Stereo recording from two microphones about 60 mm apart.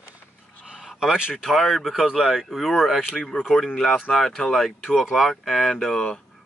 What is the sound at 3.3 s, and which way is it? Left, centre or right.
Speech, left.